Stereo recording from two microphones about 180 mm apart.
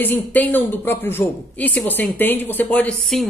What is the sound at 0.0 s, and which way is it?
Speech, 10° left (ahead or behind).